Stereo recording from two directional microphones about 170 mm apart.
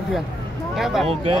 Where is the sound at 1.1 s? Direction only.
35° right (ahead or behind).